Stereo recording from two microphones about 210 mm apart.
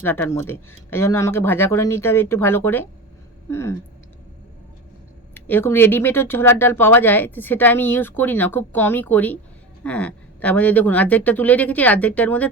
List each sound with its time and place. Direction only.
0.0 s speech: 10° left (ahead or behind)
5.3 s speech: 10° left (ahead or behind)